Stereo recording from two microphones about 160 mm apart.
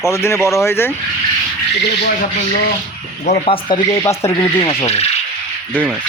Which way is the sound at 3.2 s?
45° left (ahead or behind).